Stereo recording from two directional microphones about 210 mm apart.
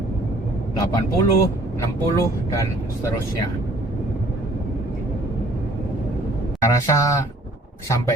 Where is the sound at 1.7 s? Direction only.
15° left (ahead or behind).